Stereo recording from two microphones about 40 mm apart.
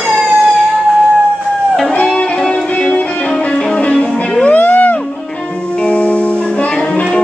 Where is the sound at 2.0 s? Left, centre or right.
Left.